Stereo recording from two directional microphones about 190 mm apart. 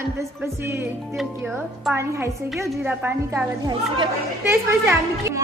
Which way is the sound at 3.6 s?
25° right (ahead or behind).